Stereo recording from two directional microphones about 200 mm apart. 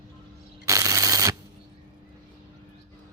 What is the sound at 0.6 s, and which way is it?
Shuffling cards, 15° right (ahead or behind).